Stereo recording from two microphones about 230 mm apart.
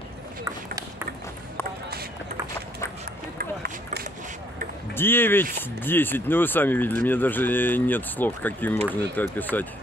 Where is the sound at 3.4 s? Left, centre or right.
Right.